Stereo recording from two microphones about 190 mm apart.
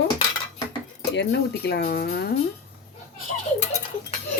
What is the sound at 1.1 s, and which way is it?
Speech, 65° left (ahead or behind).